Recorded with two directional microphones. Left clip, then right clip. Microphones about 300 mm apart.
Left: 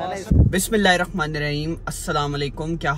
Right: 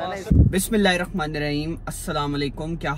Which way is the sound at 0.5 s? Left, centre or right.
Centre.